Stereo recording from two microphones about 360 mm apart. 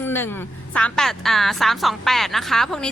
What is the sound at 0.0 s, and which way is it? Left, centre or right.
A woman's voice, centre.